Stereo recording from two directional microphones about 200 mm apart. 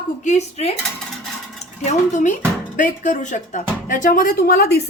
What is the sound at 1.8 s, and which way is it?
A woman's voice, 35° left (ahead or behind).